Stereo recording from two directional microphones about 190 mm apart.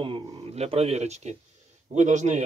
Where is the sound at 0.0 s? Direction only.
30° right (ahead or behind).